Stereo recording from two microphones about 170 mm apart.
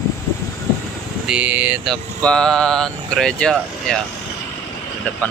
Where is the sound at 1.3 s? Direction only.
5° right (ahead or behind).